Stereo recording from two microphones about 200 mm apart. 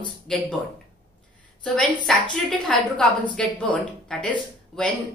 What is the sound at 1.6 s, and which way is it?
Speech, 5° left (ahead or behind).